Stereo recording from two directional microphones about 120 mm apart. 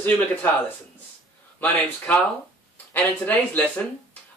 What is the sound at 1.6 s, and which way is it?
Speech, 15° left (ahead or behind).